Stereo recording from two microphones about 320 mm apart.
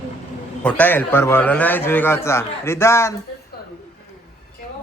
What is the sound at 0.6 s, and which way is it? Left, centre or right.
A man's voice, centre.